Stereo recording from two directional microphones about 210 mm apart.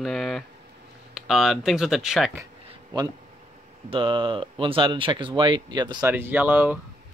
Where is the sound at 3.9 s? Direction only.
25° right (ahead or behind).